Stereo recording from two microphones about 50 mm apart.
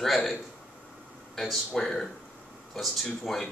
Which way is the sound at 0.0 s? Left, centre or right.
Centre.